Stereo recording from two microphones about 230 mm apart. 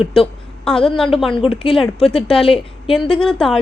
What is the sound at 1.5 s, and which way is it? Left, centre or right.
A woman's voice, left.